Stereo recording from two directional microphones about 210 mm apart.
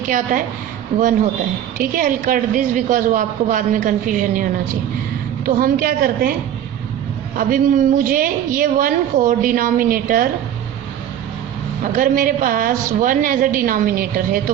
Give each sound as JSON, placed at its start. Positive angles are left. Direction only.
{"t": 0.9, "sound": "a woman's voice", "side_deg": -35}
{"t": 5.5, "sound": "a woman's voice", "side_deg": -45}
{"t": 7.3, "sound": "a woman's voice", "side_deg": -40}
{"t": 11.9, "sound": "a woman's voice", "side_deg": -40}